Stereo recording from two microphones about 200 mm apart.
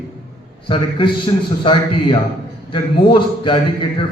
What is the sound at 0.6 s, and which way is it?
A man's voice, 25° left (ahead or behind).